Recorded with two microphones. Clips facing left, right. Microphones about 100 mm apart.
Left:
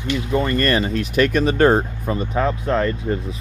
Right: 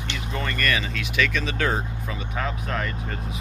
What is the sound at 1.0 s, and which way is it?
Speech, 45° left (ahead or behind).